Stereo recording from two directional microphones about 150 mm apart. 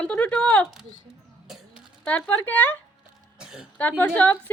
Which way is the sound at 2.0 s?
10° left (ahead or behind).